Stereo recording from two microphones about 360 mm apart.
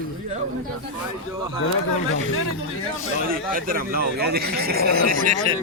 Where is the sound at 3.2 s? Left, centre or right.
Right.